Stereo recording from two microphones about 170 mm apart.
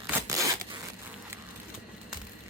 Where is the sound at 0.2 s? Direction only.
20° right (ahead or behind).